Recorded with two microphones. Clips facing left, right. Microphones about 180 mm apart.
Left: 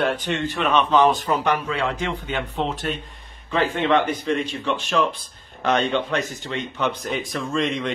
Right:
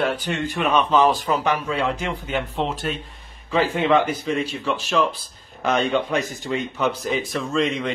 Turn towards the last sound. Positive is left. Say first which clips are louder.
# right 1 dB
turn(degrees=0)  # may be behind; listen again after turning